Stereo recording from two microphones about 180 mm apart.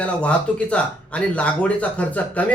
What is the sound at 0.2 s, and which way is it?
A man's voice, 5° left (ahead or behind).